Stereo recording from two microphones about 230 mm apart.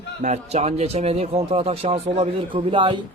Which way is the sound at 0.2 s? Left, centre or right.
Right.